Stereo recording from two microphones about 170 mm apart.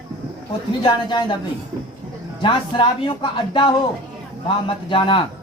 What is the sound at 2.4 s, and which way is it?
A man's voice, 30° left (ahead or behind).